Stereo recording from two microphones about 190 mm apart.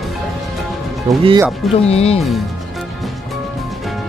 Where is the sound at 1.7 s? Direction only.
30° left (ahead or behind).